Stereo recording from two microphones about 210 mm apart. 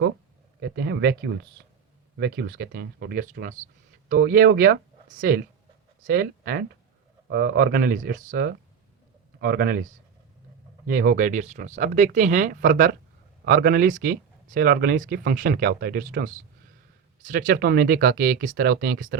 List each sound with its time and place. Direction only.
0.6 s speech: 55° right (ahead or behind)
10.8 s speech: 45° right (ahead or behind)